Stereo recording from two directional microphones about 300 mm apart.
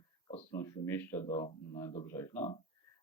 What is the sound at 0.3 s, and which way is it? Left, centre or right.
Speech, centre.